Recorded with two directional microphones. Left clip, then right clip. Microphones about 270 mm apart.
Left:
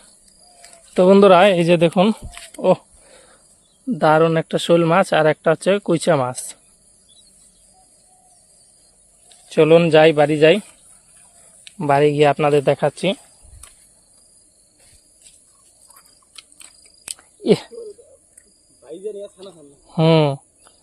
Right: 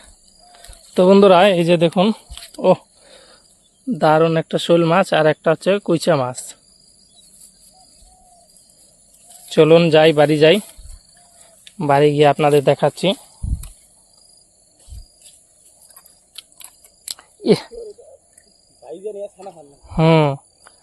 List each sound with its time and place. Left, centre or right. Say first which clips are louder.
0.9 s speech: even; centre
2.6 s a sound: right 2 dB; centre
3.8 s speech: even; centre
9.5 s speech: right 1 dB; centre
11.8 s speech: right 1 dB; centre
16.3 s chewing: right 3 dB; centre
17.2 s whispering: right 1 dB; centre
19.9 s cricket: right 1 dB; centre